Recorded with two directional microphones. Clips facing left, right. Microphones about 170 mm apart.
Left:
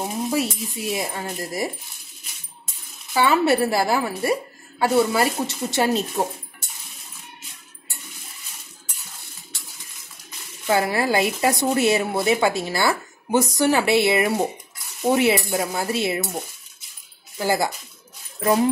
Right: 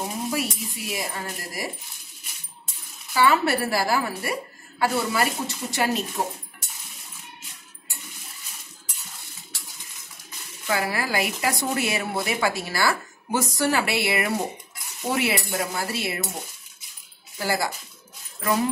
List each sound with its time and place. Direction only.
0.3 s speech: 25° left (ahead or behind)
3.1 s speech: 20° left (ahead or behind)
10.7 s speech: 25° left (ahead or behind)
17.4 s speech: 20° left (ahead or behind)